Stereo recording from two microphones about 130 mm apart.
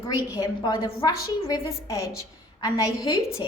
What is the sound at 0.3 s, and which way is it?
A woman's voice, 30° left (ahead or behind).